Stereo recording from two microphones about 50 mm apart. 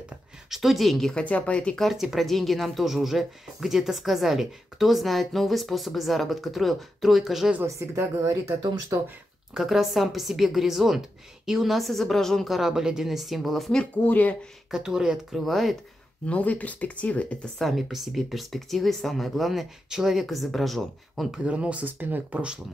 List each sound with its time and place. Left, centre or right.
0.5 s speech: centre
1.1 s speech: left
2.1 s speech: centre
7.6 s a woman's voice: right
9.6 s speech: centre
12.5 s speech: centre
14.0 s speech: left
14.7 s speech: centre
15.3 s speech: centre
16.3 s speech: left
17.6 s speech: centre
20.2 s speech: centre
21.4 s speech: right
21.8 s speech: right